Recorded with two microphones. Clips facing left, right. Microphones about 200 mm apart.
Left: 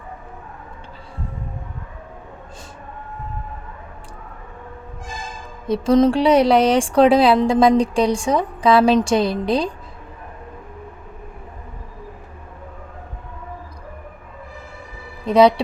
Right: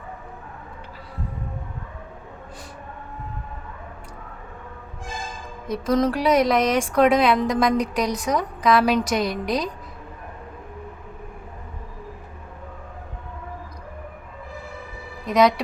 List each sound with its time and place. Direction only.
5.6 s speech: 30° left (ahead or behind)
15.3 s speech: 30° left (ahead or behind)